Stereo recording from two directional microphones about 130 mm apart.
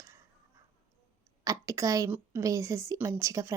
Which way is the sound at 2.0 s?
15° right (ahead or behind).